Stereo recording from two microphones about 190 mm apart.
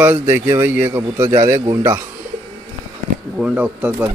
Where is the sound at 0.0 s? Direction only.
10° right (ahead or behind).